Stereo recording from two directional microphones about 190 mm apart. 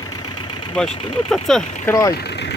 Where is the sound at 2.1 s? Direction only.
60° left (ahead or behind).